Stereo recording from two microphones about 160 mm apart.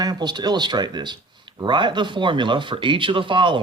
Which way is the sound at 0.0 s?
25° right (ahead or behind).